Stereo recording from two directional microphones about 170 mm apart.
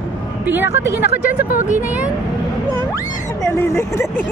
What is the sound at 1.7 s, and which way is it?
Speech, 10° right (ahead or behind).